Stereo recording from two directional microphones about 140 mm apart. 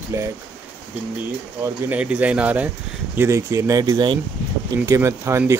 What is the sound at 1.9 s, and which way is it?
Speech, 10° right (ahead or behind).